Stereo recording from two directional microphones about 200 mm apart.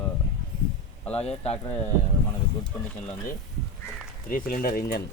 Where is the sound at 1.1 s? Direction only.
30° left (ahead or behind).